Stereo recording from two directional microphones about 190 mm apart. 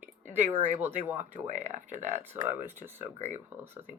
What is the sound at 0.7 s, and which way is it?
Speech, 10° right (ahead or behind).